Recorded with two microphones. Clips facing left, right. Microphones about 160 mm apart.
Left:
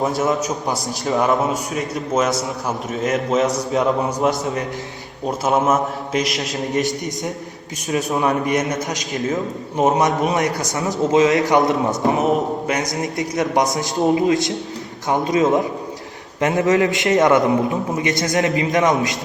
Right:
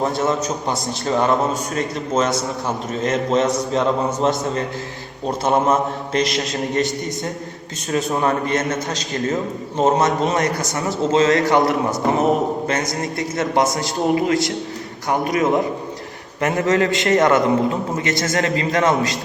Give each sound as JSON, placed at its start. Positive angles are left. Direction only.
{"t": 0.0, "sound": "a man's voice", "side_deg": 0}
{"t": 5.5, "sound": "a man's voice", "side_deg": 5}
{"t": 8.3, "sound": "a man's voice", "side_deg": 15}
{"t": 12.1, "sound": "a man's voice", "side_deg": 0}
{"t": 12.7, "sound": "a man's voice", "side_deg": 15}